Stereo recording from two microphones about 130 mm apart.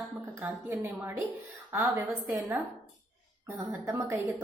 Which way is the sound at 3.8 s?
25° right (ahead or behind).